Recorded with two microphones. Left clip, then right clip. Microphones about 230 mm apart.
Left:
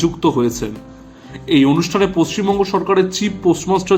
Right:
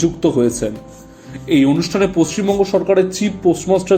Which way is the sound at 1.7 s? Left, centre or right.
Centre.